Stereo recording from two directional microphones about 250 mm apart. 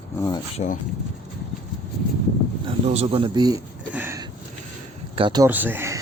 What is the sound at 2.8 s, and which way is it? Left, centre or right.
Speech, right.